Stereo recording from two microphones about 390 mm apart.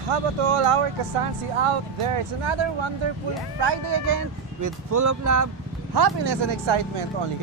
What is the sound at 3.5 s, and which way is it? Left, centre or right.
Speech, right.